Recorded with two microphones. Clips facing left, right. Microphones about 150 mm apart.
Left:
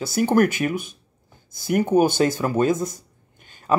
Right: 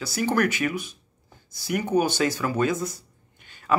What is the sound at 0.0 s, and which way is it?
Speech, 50° left (ahead or behind).